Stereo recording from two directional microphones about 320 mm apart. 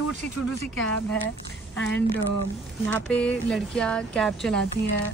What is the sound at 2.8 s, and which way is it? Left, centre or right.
Speech, centre.